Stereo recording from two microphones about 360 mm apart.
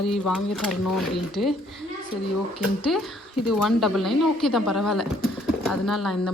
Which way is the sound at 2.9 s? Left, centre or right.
Centre.